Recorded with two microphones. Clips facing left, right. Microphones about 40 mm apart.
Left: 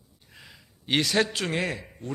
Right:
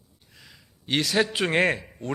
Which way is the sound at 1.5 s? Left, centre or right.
Right.